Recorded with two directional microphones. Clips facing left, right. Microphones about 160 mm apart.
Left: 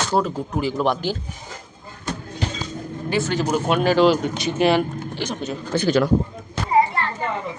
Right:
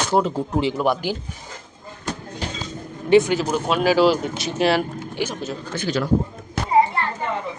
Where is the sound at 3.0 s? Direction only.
20° right (ahead or behind).